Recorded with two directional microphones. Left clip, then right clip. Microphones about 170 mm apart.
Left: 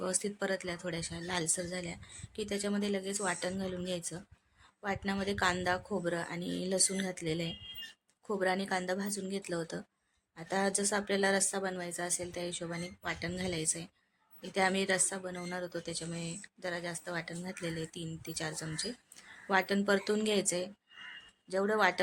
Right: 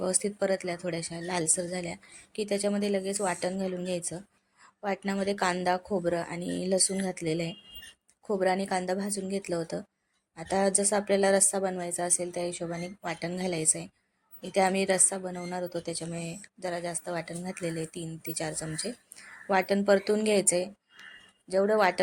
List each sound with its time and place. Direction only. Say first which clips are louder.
0.0 s speech: right 6 dB; 10° right (ahead or behind)